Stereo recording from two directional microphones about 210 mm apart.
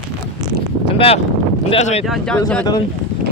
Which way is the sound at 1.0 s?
30° left (ahead or behind).